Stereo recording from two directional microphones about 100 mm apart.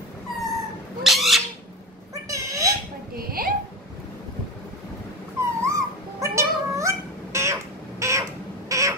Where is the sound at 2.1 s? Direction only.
35° right (ahead or behind).